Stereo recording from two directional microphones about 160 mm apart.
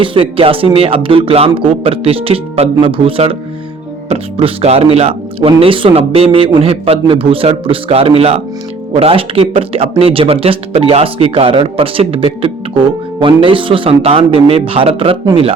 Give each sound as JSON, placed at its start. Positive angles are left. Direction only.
{"t": 0.0, "sound": "speech", "side_deg": -35}